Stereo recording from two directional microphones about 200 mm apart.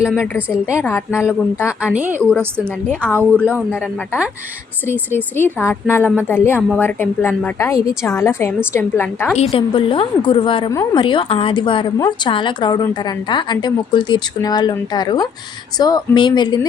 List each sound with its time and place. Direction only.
0.3 s a woman's voice: 5° right (ahead or behind)
1.2 s a woman's voice: 10° left (ahead or behind)
1.8 s a woman's voice: 5° right (ahead or behind)
3.1 s a woman's voice: 5° left (ahead or behind)
4.9 s a woman's voice: 10° left (ahead or behind)
9.4 s a woman's voice: 30° left (ahead or behind)